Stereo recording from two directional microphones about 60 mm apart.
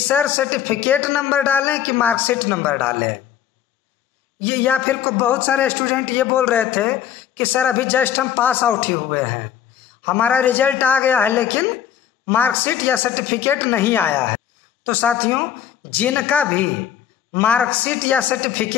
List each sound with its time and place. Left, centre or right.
0.1 s a man's voice: left
4.4 s a man's voice: left